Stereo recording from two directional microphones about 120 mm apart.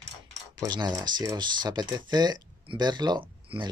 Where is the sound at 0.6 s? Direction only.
35° right (ahead or behind).